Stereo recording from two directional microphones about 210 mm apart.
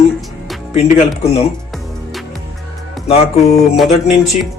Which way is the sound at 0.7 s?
30° left (ahead or behind).